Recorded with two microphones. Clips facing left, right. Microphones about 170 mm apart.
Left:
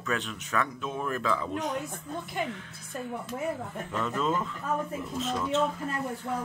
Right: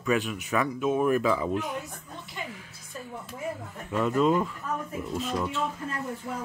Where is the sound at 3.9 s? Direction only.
15° right (ahead or behind).